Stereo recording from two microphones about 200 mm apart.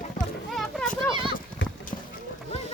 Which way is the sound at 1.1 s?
25° right (ahead or behind).